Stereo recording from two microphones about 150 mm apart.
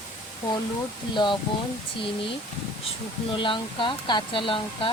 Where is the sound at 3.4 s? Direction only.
35° left (ahead or behind).